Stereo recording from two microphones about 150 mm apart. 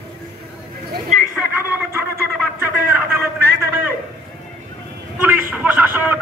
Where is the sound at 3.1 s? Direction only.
15° right (ahead or behind).